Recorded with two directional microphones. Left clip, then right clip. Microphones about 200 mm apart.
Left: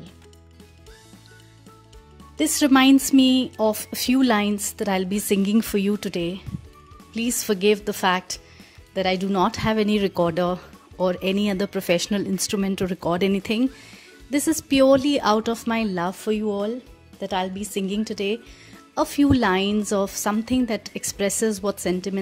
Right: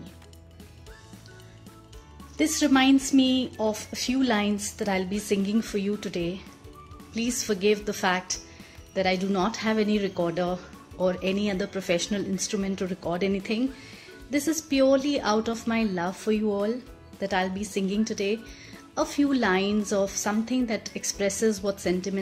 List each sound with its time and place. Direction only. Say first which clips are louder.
2.3 s speech: left 4 dB; 50° left (ahead or behind)